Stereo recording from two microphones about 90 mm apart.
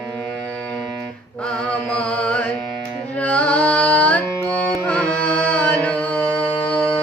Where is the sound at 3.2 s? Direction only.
15° left (ahead or behind).